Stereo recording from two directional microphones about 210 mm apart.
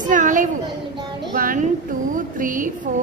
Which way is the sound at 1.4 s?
40° right (ahead or behind).